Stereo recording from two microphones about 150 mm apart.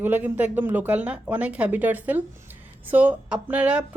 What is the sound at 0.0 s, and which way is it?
Speech, 10° right (ahead or behind).